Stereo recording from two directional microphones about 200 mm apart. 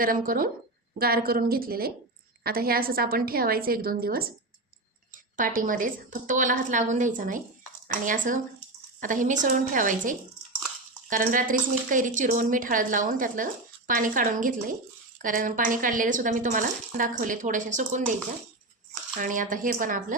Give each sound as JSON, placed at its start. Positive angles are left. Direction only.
{"t": 0.0, "sound": "a woman's voice", "side_deg": -45}
{"t": 19.2, "sound": "a woman's voice", "side_deg": -40}